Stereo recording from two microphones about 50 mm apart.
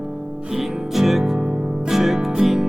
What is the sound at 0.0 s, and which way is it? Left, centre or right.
Music, centre.